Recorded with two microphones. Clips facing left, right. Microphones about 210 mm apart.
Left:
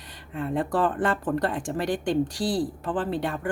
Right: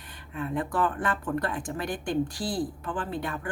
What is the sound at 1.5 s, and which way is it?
Speech, 90° left.